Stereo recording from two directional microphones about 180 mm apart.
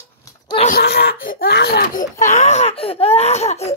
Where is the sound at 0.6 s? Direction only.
60° left (ahead or behind).